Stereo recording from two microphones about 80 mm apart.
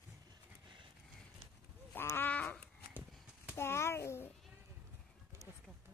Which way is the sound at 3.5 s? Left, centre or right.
Left.